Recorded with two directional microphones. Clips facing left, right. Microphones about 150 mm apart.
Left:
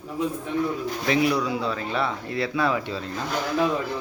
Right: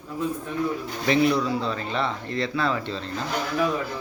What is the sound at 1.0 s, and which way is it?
Speech, 5° left (ahead or behind).